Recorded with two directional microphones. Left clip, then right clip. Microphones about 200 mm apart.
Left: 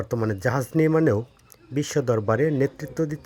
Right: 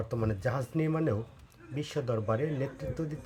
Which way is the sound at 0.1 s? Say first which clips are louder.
Left 9 dB; 40° left (ahead or behind).